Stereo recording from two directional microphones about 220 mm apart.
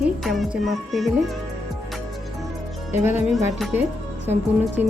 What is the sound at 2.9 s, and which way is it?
Speech, 10° right (ahead or behind).